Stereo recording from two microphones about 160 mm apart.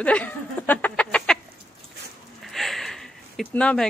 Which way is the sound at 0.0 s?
10° left (ahead or behind).